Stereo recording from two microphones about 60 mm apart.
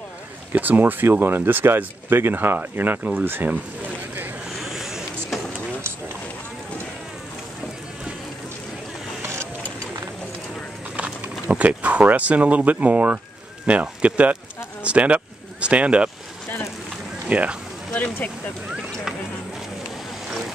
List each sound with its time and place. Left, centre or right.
0.5 s speech: right
3.0 s speech: right
3.3 s speech: right
4.6 s power windows: centre
9.2 s vehicle: right
11.4 s speech: right
17.3 s speech: right
17.9 s speech: left
18.7 s a sound: centre
20.2 s vehicle: centre